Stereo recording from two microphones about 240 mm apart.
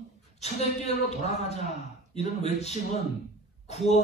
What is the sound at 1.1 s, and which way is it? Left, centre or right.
Speech, left.